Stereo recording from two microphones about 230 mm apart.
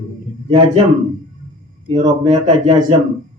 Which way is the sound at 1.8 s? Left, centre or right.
Right.